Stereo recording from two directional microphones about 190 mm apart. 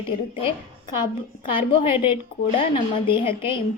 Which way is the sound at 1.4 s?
25° left (ahead or behind).